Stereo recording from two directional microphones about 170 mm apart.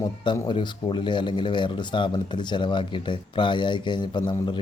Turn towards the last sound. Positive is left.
turn(degrees=30)  # may be behind; listen again after turning